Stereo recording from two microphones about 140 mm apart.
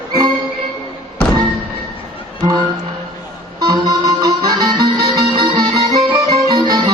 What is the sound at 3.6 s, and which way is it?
Music, 30° right (ahead or behind).